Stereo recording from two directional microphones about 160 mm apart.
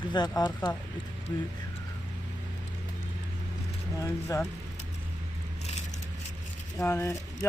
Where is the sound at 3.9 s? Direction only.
20° left (ahead or behind).